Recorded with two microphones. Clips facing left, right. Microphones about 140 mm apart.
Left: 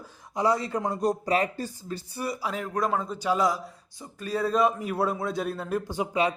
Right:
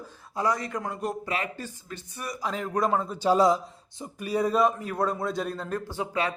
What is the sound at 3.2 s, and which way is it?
Speech, 30° right (ahead or behind).